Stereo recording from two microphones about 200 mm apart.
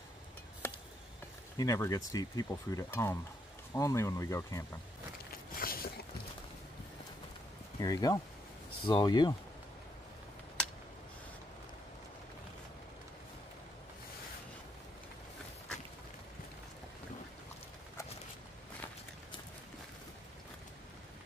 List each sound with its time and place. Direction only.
1.6 s speech: 15° left (ahead or behind)
5.6 s a sound: 50° left (ahead or behind)
7.8 s speech: 15° left (ahead or behind)